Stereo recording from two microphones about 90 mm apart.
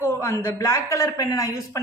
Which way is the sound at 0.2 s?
30° left (ahead or behind).